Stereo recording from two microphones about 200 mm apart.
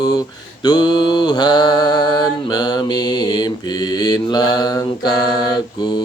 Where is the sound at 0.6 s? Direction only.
20° left (ahead or behind).